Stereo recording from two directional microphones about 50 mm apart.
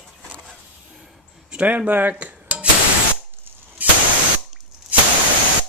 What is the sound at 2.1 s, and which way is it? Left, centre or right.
Cutlery, right.